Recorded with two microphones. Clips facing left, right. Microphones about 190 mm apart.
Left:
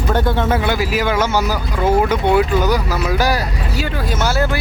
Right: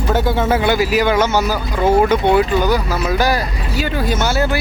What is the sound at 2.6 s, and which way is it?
Speech, 15° left (ahead or behind).